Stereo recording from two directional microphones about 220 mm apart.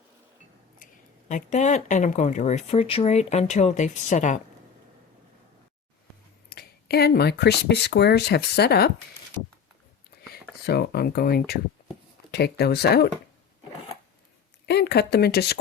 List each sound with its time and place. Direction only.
1.3 s speech: 35° left (ahead or behind)
6.5 s speech: 45° left (ahead or behind)
10.7 s speech: 45° left (ahead or behind)
14.7 s speech: 45° left (ahead or behind)